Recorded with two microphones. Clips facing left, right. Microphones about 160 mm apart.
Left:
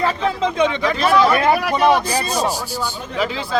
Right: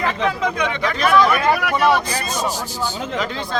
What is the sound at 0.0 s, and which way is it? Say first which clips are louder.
Speech: left 1 dB; 30° left (ahead or behind).